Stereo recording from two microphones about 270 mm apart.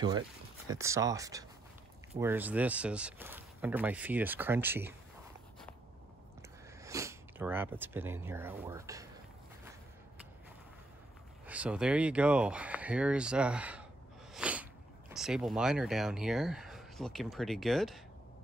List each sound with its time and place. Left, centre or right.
0.7 s speech: centre
6.8 s speech: centre
11.4 s speech: centre